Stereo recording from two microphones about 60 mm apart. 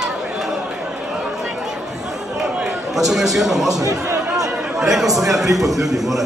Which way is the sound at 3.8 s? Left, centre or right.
Right.